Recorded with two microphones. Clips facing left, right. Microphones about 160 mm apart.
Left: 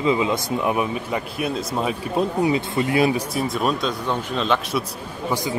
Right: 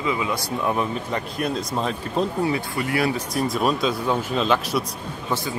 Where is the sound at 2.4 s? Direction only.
20° left (ahead or behind).